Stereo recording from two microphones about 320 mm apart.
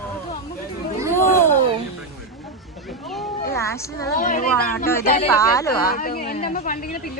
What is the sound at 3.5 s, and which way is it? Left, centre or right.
Speech, centre.